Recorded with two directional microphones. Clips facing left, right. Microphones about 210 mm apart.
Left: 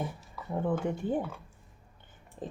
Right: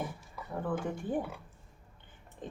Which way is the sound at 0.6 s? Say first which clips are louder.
Left 4 dB; 25° left (ahead or behind).